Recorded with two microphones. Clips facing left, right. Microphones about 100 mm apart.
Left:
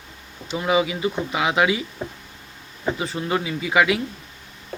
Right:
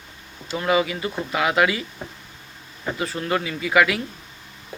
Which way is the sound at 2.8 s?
20° left (ahead or behind).